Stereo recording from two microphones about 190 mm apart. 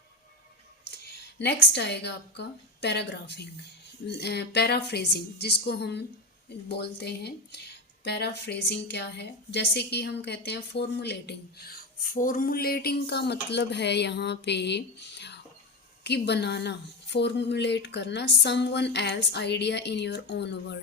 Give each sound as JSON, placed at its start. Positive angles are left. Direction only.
{"t": 0.9, "sound": "a woman's voice", "side_deg": 60}